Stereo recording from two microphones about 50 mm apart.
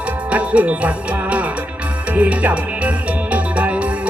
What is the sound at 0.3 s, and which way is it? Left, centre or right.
Music, right.